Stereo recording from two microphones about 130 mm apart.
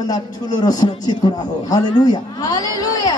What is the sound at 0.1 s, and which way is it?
A man's voice, 30° left (ahead or behind).